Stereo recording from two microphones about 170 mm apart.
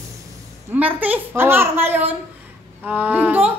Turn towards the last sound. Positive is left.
turn(degrees=-10)  # may be behind; listen again after turning